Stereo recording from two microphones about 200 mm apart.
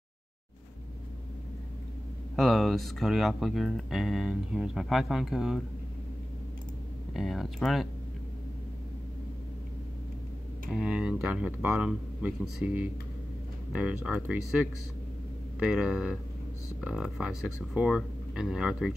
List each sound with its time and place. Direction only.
2.3 s speech: centre (ahead or behind)
7.2 s speech: centre (ahead or behind)
10.7 s speech: 5° right (ahead or behind)
15.6 s speech: 5° right (ahead or behind)